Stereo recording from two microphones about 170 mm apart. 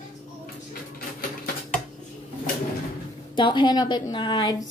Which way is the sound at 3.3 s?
25° left (ahead or behind).